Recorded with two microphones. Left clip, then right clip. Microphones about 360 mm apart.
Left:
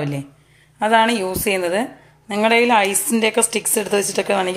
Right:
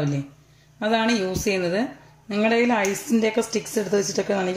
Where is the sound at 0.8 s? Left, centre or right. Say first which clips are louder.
Left 7 dB; centre.